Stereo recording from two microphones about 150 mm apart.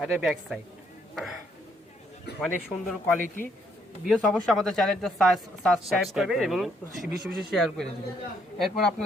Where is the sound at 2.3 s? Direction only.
90° left.